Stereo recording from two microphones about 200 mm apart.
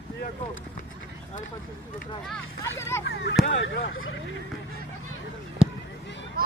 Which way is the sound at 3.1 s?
60° left (ahead or behind).